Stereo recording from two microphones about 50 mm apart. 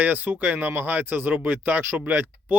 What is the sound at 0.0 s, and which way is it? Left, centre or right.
Speech, right.